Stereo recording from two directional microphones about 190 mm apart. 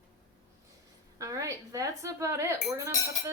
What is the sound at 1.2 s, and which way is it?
Speech, 15° right (ahead or behind).